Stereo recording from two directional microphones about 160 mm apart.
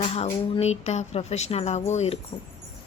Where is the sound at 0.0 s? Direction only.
40° left (ahead or behind).